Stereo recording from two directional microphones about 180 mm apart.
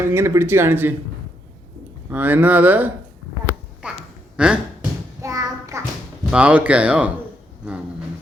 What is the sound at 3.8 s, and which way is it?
Quack, 5° right (ahead or behind).